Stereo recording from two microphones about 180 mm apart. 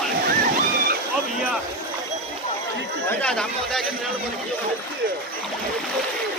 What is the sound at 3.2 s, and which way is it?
Chatter, 5° left (ahead or behind).